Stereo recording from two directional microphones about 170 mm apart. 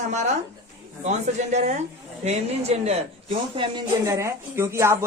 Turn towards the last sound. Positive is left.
turn(degrees=-15)  # may be behind; listen again after turning